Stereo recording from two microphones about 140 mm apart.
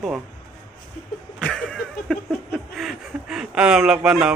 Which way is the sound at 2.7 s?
Centre (ahead or behind).